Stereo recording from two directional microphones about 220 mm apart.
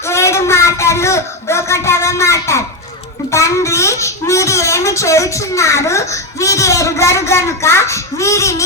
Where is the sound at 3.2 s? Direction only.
15° left (ahead or behind).